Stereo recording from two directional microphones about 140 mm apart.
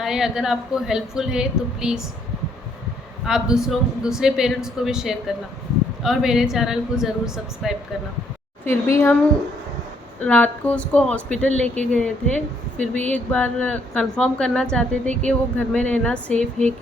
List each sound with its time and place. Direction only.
0.0 s a woman's voice: 5° right (ahead or behind)
3.2 s a woman's voice: 5° right (ahead or behind)
8.6 s a woman's voice: 20° left (ahead or behind)
10.2 s a woman's voice: 10° left (ahead or behind)